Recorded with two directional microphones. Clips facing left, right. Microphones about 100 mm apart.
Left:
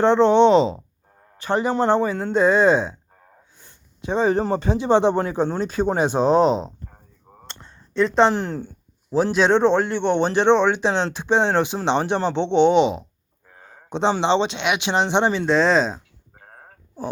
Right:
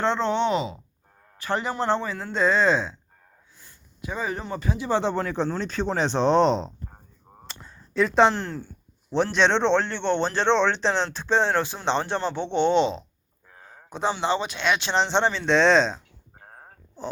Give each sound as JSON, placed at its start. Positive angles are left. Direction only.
{"t": 0.0, "sound": "speech", "side_deg": 20}
{"t": 3.6, "sound": "a sound", "side_deg": 25}
{"t": 4.5, "sound": "speech", "side_deg": 25}
{"t": 7.4, "sound": "a sound", "side_deg": -5}
{"t": 8.3, "sound": "speech", "side_deg": 15}
{"t": 9.1, "sound": "speech", "side_deg": 5}
{"t": 14.2, "sound": "speech", "side_deg": 25}
{"t": 15.5, "sound": "speech", "side_deg": 5}